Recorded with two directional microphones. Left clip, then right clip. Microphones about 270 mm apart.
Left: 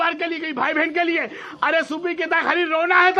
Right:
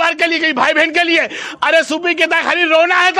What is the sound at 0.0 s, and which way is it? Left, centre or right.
A man's voice, right.